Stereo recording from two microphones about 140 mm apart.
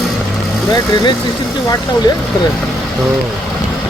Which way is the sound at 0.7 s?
30° left (ahead or behind).